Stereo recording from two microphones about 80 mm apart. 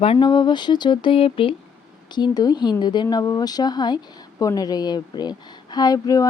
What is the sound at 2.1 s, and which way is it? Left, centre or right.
Speech, left.